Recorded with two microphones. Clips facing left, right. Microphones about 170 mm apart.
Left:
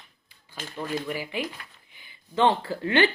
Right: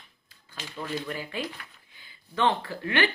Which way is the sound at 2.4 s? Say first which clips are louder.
Left 3 dB; 30° left (ahead or behind).